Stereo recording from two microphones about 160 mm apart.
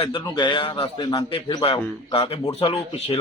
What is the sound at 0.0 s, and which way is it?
A man's voice, 30° left (ahead or behind).